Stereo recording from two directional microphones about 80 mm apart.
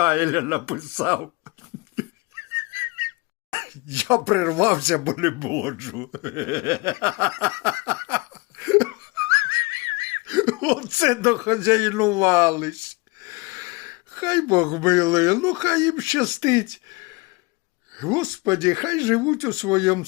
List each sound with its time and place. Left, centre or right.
0.0 s a man's voice: right
2.0 s a sound: right
3.5 s speech: right